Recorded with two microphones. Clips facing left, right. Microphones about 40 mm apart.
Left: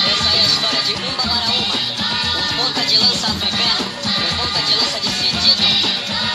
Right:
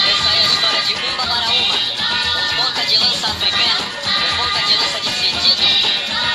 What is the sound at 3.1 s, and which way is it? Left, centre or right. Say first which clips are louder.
Speech: right 1 dB; right.